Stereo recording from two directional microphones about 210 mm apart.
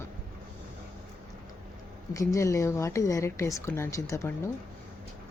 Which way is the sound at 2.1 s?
15° left (ahead or behind).